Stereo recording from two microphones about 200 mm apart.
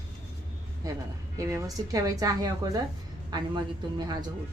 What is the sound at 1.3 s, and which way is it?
A woman's voice, 15° right (ahead or behind).